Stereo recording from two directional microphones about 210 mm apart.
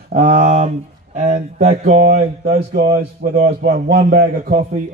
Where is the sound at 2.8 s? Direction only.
50° right (ahead or behind).